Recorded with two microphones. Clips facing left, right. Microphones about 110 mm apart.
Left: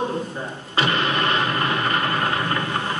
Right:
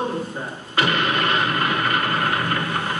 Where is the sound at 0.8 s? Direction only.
30° left (ahead or behind).